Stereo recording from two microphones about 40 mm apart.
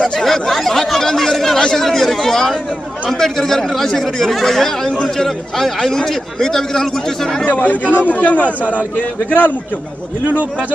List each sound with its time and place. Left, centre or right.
0.0 s chatter: centre
1.8 s speech: centre
7.5 s a man's voice: left